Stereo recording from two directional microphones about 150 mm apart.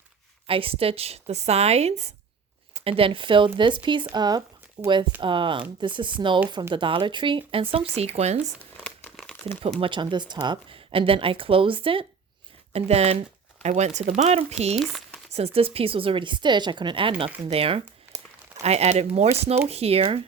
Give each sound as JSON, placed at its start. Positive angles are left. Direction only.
{"t": 0.4, "sound": "speech", "side_deg": -40}
{"t": 8.8, "sound": "crumpling", "side_deg": 5}
{"t": 9.8, "sound": "speech", "side_deg": -30}
{"t": 14.8, "sound": "speech", "side_deg": 0}
{"t": 15.3, "sound": "speech", "side_deg": -45}